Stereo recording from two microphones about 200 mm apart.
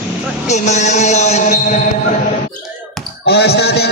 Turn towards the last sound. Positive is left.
turn(degrees=55)  # may be behind; listen again after turning